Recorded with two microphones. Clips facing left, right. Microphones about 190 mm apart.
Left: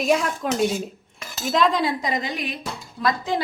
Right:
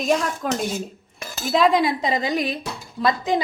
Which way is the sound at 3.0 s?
20° right (ahead or behind).